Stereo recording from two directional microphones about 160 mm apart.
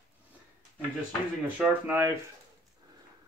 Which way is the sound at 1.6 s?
10° right (ahead or behind).